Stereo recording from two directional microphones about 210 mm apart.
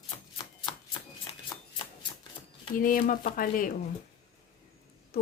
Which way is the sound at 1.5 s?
20° left (ahead or behind).